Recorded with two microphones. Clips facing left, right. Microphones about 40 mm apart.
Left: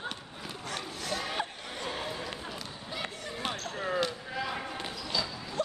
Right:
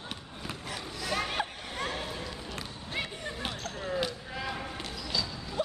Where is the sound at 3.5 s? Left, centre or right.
Left.